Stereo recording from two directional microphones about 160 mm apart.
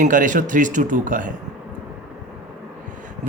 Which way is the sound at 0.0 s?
55° right (ahead or behind).